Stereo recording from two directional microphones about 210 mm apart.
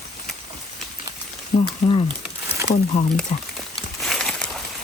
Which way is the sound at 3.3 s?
30° left (ahead or behind).